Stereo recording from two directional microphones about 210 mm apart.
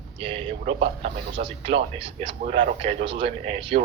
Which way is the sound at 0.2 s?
25° right (ahead or behind).